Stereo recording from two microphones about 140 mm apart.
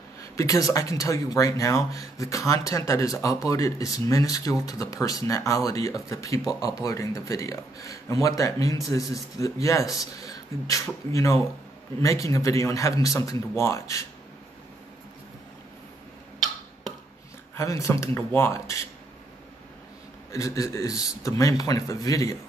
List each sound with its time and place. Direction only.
0.2 s speech: 25° left (ahead or behind)
17.6 s speech: 20° left (ahead or behind)
20.2 s speech: 25° left (ahead or behind)